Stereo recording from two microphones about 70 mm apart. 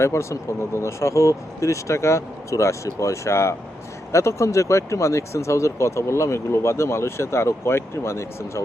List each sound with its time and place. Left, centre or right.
0.0 s speech: left